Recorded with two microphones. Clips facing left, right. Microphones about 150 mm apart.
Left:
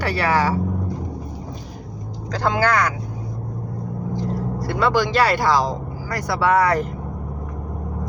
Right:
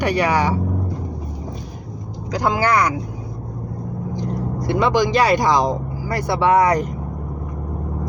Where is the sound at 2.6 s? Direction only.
15° right (ahead or behind).